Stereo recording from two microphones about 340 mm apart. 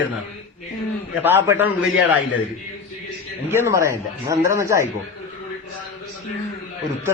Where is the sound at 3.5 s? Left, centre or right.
Centre.